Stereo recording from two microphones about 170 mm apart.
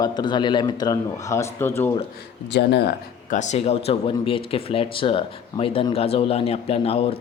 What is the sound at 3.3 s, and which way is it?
Speech, 45° left (ahead or behind).